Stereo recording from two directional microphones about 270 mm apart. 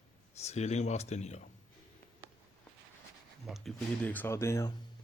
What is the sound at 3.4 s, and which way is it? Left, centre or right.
Speech, centre.